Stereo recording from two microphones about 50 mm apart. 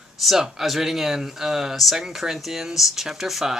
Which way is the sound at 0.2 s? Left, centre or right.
Centre.